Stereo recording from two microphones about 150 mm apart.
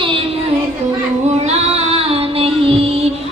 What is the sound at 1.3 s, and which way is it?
Female singing, 45° right (ahead or behind).